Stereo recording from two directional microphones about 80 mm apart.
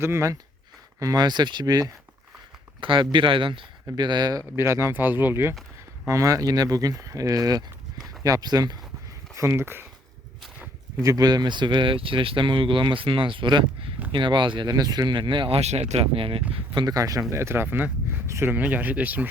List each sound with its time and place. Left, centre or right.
0.0 s speech: right
0.9 s speech: right
2.8 s speech: right
3.9 s speech: right
4.5 s speech: right
4.9 s speech: right
6.1 s speech: right
9.3 s speech: right
11.0 s speech: right
11.3 s speech: right
14.7 s speech: right
16.8 s speech: right
18.3 s speech: right
18.5 s speech: right